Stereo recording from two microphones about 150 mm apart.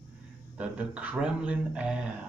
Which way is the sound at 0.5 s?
10° right (ahead or behind).